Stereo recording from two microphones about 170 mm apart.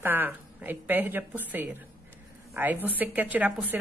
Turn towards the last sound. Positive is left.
turn(degrees=-10)  # may be behind; listen again after turning